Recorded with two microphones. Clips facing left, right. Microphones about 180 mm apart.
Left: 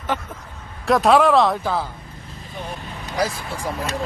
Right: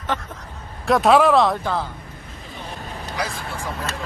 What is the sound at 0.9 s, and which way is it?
Speech, centre (ahead or behind).